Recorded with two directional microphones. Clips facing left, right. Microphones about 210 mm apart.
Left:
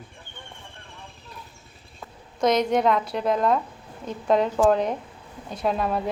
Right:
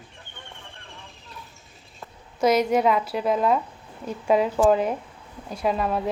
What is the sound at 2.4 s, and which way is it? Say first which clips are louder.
A woman's voice: right 1 dB; 10° right (ahead or behind).